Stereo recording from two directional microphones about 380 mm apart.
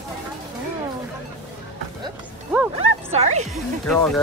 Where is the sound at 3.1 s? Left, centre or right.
Centre.